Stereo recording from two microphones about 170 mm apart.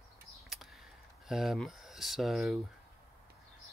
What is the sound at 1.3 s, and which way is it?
Speech, centre (ahead or behind).